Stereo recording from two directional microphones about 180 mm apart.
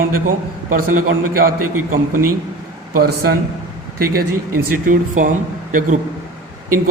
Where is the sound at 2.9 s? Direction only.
60° right (ahead or behind).